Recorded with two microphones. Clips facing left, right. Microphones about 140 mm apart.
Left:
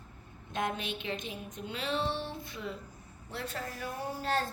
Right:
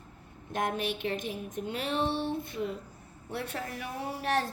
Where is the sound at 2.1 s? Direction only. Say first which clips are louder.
Right 5 dB; 55° right (ahead or behind).